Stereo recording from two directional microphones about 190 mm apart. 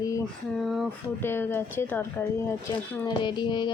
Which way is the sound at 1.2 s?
10° left (ahead or behind).